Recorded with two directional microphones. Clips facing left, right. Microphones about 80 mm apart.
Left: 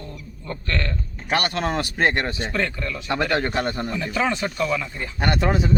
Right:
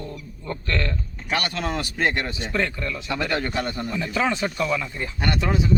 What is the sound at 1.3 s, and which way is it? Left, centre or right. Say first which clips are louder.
Speech: left 3 dB; left.